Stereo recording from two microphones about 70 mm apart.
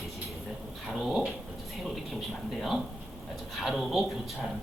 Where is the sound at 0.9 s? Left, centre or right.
Centre.